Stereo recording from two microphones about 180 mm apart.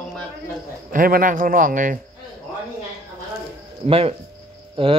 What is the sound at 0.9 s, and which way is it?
Speech, 50° right (ahead or behind).